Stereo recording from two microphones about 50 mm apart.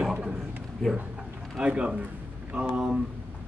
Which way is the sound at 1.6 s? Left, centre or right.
Right.